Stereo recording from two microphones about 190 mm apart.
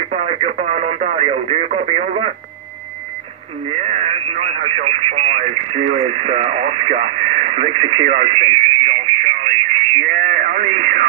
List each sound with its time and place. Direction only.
0.1 s radio: 35° right (ahead or behind)
3.7 s speech: 35° right (ahead or behind)
10.0 s radio: 40° right (ahead or behind)